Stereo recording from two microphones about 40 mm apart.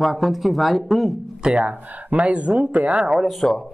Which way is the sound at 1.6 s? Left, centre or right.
Right.